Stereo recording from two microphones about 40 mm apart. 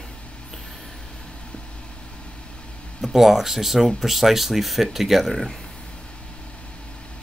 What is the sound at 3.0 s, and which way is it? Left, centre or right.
Speech, centre.